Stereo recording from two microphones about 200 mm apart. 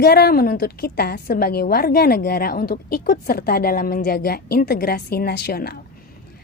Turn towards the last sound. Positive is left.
turn(degrees=50)  # may be behind; listen again after turning